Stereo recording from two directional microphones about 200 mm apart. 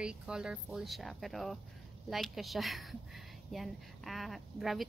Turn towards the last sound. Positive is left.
turn(degrees=0)  # may be behind; listen again after turning